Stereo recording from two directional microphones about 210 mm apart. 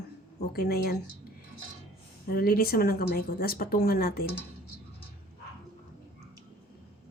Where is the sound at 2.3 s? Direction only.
45° left (ahead or behind).